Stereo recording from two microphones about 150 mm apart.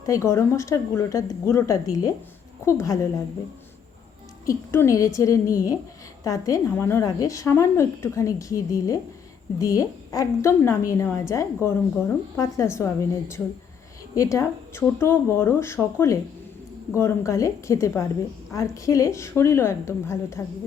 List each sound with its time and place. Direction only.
0.0 s a woman's voice: 20° left (ahead or behind)
4.4 s a woman's voice: 20° left (ahead or behind)
14.2 s a woman's voice: 20° left (ahead or behind)